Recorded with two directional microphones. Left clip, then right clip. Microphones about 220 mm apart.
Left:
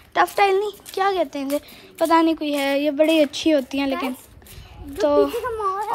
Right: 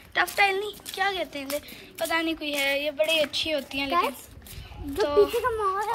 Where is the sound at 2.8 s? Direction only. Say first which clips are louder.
Left 7 dB; 70° left (ahead or behind).